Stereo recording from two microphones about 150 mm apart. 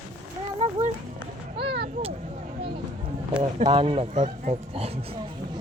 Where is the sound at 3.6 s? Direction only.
35° right (ahead or behind).